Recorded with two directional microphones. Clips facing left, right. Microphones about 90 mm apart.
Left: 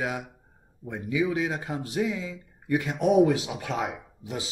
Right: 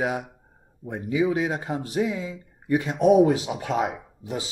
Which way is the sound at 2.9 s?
5° right (ahead or behind).